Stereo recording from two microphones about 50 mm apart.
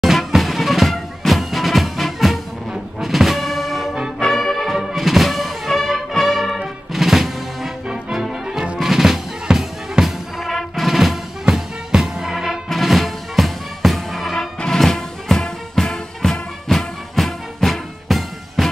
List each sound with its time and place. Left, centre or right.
0.0 s music: centre
8.7 s drum: centre
10.0 s music: centre
12.6 s music: centre